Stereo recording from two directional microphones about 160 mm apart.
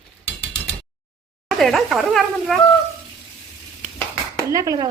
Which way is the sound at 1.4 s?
Centre (ahead or behind).